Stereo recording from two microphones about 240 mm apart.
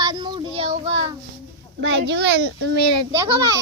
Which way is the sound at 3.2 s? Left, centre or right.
Centre.